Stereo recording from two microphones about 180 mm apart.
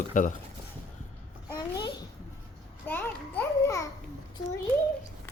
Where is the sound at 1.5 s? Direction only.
20° left (ahead or behind).